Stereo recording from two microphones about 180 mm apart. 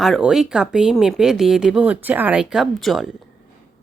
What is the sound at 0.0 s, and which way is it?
A woman's voice, centre (ahead or behind).